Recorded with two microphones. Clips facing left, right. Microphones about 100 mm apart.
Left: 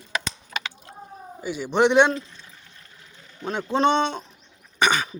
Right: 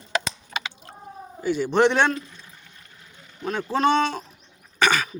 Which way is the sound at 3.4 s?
25° left (ahead or behind).